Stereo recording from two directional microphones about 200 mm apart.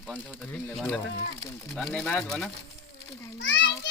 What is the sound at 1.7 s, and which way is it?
Speech, 5° left (ahead or behind).